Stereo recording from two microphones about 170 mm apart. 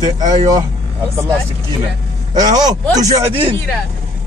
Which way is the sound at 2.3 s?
25° right (ahead or behind).